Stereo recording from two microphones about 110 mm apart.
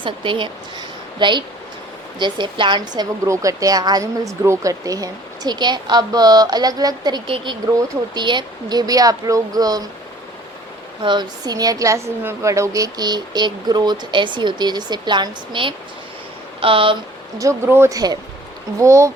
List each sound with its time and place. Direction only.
0.0 s a woman's voice: 50° right (ahead or behind)
7.3 s a woman's voice: 55° right (ahead or behind)
7.8 s a woman's voice: 40° right (ahead or behind)
11.0 s a woman's voice: 45° right (ahead or behind)
17.3 s a woman's voice: 30° right (ahead or behind)
17.9 s a woman's voice: 35° right (ahead or behind)